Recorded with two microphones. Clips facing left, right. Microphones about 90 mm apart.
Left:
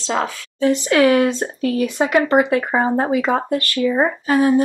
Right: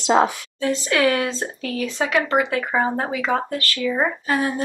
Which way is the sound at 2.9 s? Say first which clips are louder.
Left 5 dB; 20° left (ahead or behind).